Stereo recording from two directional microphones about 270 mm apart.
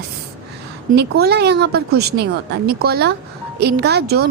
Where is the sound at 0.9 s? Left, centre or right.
Right.